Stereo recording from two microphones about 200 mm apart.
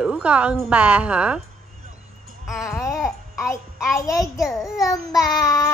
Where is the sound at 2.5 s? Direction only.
Centre (ahead or behind).